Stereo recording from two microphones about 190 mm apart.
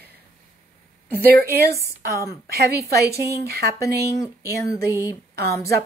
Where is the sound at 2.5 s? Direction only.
55° right (ahead or behind).